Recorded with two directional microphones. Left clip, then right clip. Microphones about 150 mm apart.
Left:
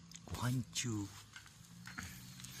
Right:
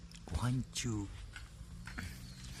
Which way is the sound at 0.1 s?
Centre (ahead or behind).